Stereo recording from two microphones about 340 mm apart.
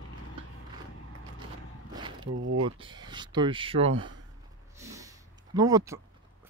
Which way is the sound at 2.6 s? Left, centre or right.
Centre.